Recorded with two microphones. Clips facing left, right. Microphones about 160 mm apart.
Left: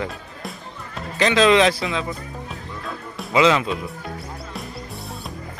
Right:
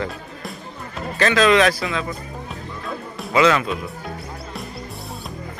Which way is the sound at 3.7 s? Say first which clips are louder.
Even; centre (ahead or behind).